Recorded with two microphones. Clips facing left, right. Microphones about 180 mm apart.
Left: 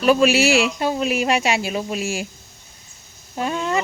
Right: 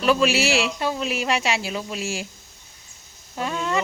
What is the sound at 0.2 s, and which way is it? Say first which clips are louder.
Speech: left 4 dB; 45° left (ahead or behind).